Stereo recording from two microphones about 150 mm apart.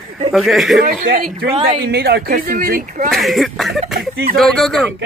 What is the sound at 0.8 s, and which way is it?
Speech, 75° right (ahead or behind).